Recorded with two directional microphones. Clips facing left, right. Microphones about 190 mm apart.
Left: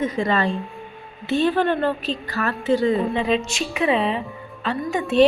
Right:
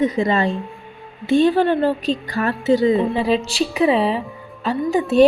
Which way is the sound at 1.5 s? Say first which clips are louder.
Right 4 dB; 10° right (ahead or behind).